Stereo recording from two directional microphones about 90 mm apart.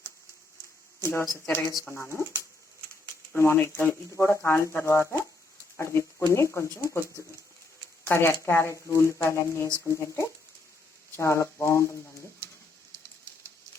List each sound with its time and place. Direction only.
1.0 s speech: 30° left (ahead or behind)
3.3 s speech: 25° left (ahead or behind)
8.0 s speech: 25° left (ahead or behind)